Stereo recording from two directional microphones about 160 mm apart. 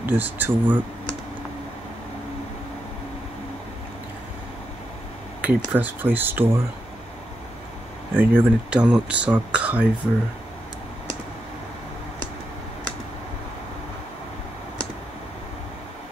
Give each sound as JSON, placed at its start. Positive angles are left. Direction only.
{"t": 0.0, "sound": "speech", "side_deg": -10}
{"t": 5.4, "sound": "speech", "side_deg": -10}
{"t": 8.2, "sound": "speech", "side_deg": -10}